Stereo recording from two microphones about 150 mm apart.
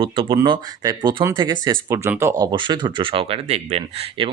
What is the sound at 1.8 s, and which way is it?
Speech, 20° right (ahead or behind).